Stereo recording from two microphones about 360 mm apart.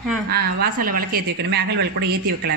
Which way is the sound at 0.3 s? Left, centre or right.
Right.